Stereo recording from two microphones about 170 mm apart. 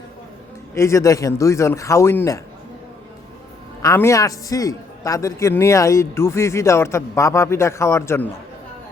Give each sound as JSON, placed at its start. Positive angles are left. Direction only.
{"t": 0.7, "sound": "a man's voice", "side_deg": 15}
{"t": 3.8, "sound": "a man's voice", "side_deg": 15}